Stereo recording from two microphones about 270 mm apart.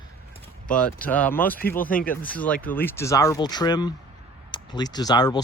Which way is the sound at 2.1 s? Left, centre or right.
Centre.